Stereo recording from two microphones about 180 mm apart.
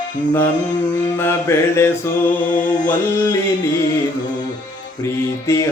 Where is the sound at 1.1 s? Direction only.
15° left (ahead or behind).